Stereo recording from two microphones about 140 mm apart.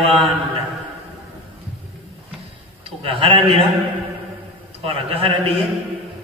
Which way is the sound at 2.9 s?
40° right (ahead or behind).